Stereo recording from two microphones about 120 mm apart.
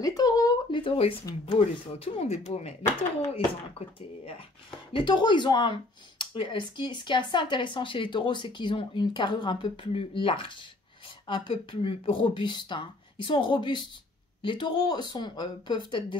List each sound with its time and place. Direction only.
0.0 s a sound: 30° left (ahead or behind); by 1.2 s 50° left (ahead or behind)
1.4 s speech: 50° left (ahead or behind)
4.9 s speech: 40° left (ahead or behind)